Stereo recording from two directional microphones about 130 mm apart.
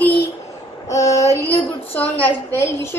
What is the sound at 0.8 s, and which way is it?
A woman's voice, 25° left (ahead or behind).